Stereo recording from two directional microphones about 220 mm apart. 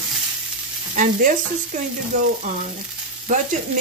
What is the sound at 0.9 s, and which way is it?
Stir, 35° right (ahead or behind).